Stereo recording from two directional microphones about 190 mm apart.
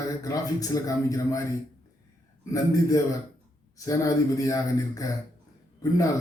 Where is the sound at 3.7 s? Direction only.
15° left (ahead or behind).